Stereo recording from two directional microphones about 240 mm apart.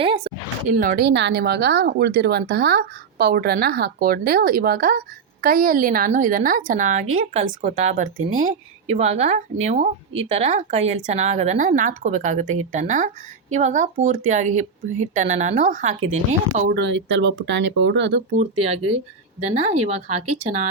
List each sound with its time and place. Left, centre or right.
0.0 s a sound: right
0.7 s speech: right
16.7 s speech: right
18.3 s speech: right
20.2 s speech: right